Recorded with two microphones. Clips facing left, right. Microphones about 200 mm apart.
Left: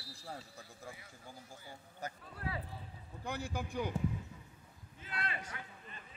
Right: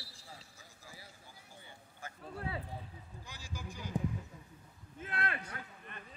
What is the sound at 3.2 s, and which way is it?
Speech, 60° left (ahead or behind).